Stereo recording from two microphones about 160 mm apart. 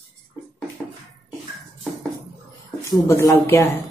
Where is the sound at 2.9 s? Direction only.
20° left (ahead or behind).